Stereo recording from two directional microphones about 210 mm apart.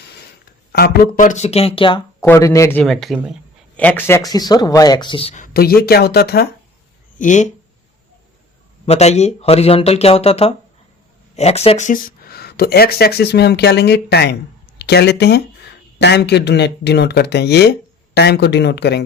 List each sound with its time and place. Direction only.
0.7 s speech: 45° left (ahead or behind); by 2.0 s 25° left (ahead or behind)
2.2 s speech: 15° left (ahead or behind)
2.8 s speech: centre (ahead or behind); by 6.5 s 50° left (ahead or behind)
7.2 s speech: 35° left (ahead or behind)
8.9 s speech: 30° left (ahead or behind); by 19.0 s 55° left (ahead or behind)